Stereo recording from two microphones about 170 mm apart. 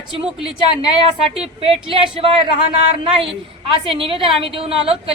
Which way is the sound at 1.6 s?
35° right (ahead or behind).